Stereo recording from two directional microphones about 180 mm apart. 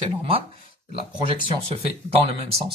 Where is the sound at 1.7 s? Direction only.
35° right (ahead or behind).